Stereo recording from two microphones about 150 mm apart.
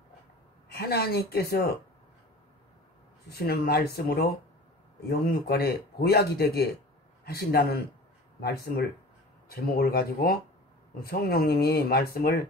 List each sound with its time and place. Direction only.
0.7 s speech: 90° left
3.3 s speech: 90° left